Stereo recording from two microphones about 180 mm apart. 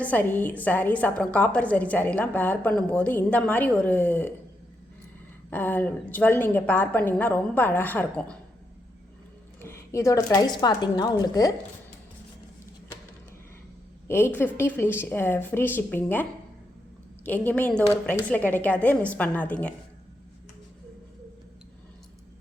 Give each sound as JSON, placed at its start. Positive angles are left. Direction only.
{"t": 0.0, "sound": "a woman's voice", "side_deg": 10}
{"t": 5.5, "sound": "a woman's voice", "side_deg": 10}
{"t": 9.6, "sound": "a sound", "side_deg": 15}
{"t": 10.3, "sound": "a woman's voice", "side_deg": 20}
{"t": 14.1, "sound": "a woman's voice", "side_deg": 10}
{"t": 17.2, "sound": "a woman's voice", "side_deg": 10}